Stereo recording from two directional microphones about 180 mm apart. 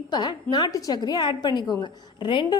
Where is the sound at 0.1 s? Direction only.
25° left (ahead or behind).